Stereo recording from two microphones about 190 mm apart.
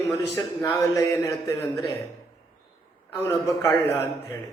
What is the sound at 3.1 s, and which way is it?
Speech, 15° left (ahead or behind).